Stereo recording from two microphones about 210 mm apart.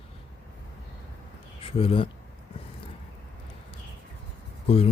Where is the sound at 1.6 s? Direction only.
25° left (ahead or behind).